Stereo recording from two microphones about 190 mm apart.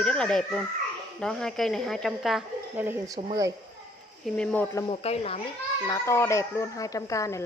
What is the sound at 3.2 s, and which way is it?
Speech, 35° right (ahead or behind).